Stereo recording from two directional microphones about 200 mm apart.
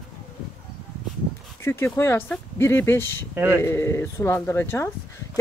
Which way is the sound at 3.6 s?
15° left (ahead or behind).